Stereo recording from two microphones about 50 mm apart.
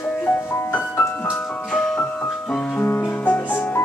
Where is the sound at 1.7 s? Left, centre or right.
Centre.